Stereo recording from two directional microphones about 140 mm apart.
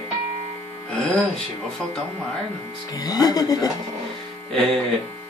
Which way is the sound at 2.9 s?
25° left (ahead or behind).